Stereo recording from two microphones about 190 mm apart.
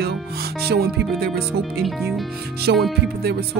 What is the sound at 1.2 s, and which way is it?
Speech, 55° right (ahead or behind).